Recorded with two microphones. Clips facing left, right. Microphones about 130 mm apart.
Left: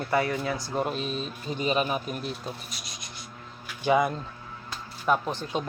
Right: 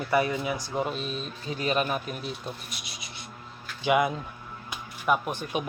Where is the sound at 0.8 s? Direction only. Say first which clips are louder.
Left 1 dB; centre (ahead or behind).